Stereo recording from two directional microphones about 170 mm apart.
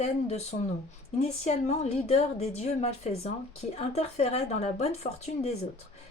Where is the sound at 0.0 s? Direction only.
40° left (ahead or behind).